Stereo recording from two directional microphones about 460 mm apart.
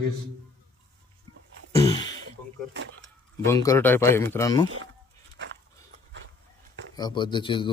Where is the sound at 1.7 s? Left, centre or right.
Centre.